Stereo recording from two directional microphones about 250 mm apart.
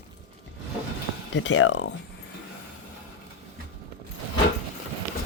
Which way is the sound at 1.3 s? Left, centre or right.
Left.